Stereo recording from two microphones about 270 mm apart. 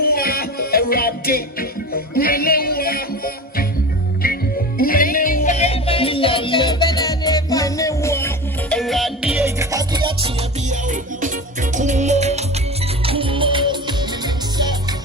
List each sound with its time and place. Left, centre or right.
0.0 s music: left
4.8 s music: left; by 13.9 s centre